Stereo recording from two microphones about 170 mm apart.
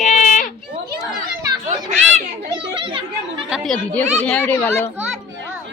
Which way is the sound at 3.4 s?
Centre (ahead or behind).